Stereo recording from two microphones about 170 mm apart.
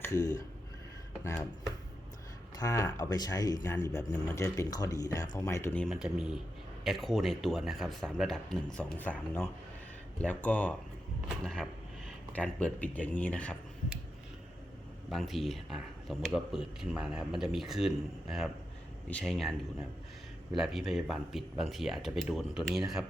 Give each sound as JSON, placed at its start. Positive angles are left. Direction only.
{"t": 0.0, "sound": "speech", "side_deg": 20}
{"t": 2.6, "sound": "speech", "side_deg": 15}
{"t": 5.8, "sound": "speech", "side_deg": 0}
{"t": 15.1, "sound": "speech", "side_deg": 0}